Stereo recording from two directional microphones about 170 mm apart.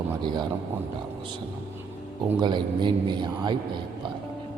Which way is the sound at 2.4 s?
25° right (ahead or behind).